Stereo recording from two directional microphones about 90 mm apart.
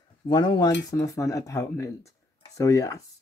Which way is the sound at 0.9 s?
35° left (ahead or behind).